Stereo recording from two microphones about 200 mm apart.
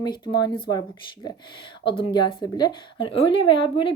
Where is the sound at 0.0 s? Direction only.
20° left (ahead or behind).